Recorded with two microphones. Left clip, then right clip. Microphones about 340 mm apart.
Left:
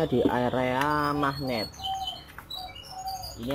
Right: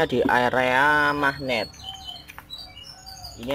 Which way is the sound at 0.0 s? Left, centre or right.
Right.